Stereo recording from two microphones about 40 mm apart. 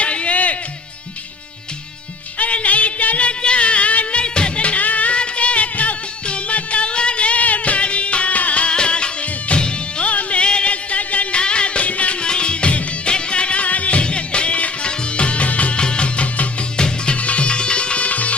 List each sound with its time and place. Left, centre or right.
0.0 s music: left
2.4 s music: left
8.7 s music: left
10.1 s music: left
12.2 s music: left
14.0 s music: left
15.8 s music: left